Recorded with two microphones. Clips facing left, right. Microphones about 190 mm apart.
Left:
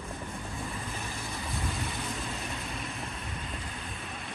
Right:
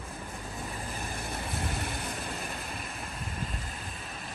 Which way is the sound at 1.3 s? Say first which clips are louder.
Right 1 dB; 60° right (ahead or behind).